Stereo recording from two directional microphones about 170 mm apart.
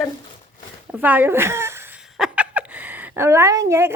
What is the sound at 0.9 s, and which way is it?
A woman's voice, 10° right (ahead or behind).